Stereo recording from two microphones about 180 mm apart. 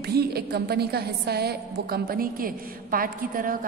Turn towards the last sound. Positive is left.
turn(degrees=-50)  # may be behind; listen again after turning